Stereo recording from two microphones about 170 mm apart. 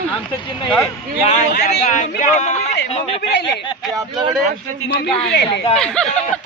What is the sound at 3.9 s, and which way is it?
Speech, 25° right (ahead or behind).